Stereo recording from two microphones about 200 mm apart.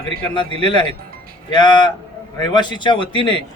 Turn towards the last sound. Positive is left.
turn(degrees=25)  # may be behind; listen again after turning